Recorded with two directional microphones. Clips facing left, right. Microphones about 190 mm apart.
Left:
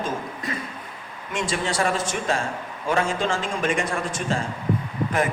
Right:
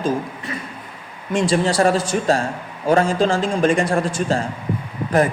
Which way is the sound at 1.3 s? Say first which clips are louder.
Right 8 dB; 35° right (ahead or behind).